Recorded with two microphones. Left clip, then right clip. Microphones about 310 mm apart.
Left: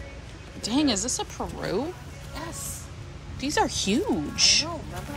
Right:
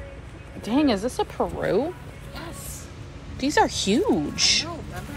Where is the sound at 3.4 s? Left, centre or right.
Centre.